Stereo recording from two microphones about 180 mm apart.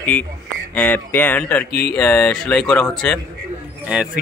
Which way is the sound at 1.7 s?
55° left (ahead or behind).